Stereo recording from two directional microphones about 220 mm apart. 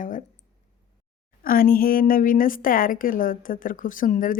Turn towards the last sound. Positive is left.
turn(degrees=35)  # may be behind; listen again after turning